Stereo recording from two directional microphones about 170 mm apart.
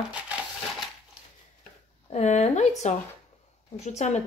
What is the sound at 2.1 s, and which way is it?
A woman's voice, 40° left (ahead or behind).